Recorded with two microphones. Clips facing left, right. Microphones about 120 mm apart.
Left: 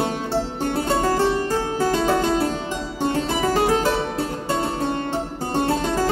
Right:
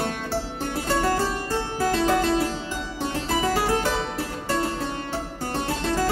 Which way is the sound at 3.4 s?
20° left (ahead or behind).